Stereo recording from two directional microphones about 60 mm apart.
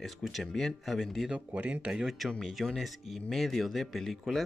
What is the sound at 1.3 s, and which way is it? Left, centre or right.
Speech, right.